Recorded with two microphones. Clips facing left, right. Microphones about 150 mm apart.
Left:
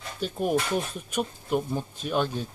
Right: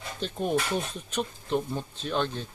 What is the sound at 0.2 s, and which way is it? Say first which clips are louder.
Speech: left 2 dB; 10° left (ahead or behind).